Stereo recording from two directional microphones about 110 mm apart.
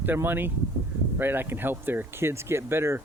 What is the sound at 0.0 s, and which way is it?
Speech, 20° right (ahead or behind).